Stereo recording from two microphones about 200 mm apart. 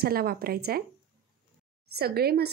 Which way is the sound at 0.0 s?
50° right (ahead or behind).